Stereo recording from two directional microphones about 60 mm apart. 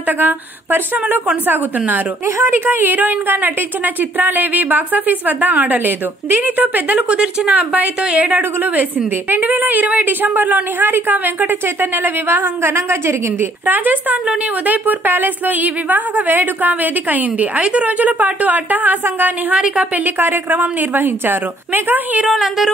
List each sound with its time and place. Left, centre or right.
0.0 s a woman's voice: right
0.9 s a woman's voice: right
2.4 s a woman's voice: right
19.5 s a woman's voice: centre
20.0 s a woman's voice: right
22.3 s a sound: centre